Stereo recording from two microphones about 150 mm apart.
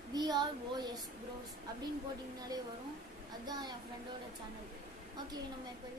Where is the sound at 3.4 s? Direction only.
30° right (ahead or behind).